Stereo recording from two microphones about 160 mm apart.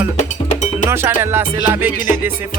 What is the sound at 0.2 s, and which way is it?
Cowbell, 50° left (ahead or behind).